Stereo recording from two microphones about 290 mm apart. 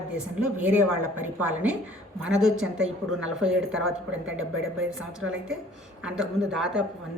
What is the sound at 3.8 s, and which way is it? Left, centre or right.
Speech, right.